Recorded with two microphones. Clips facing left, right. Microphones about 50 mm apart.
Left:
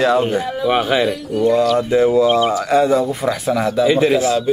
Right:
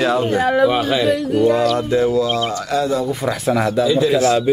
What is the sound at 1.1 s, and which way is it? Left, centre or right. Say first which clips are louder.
Speech: right 4 dB; right.